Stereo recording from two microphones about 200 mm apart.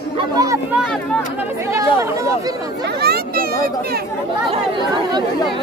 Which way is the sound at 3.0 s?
50° right (ahead or behind).